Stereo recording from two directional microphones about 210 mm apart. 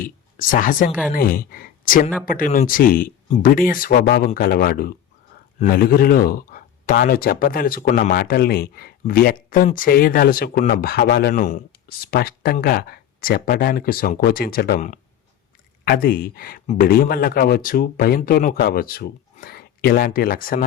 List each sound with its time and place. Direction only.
0.0 s a woman's voice: 40° left (ahead or behind)
11.3 s speech: 35° left (ahead or behind)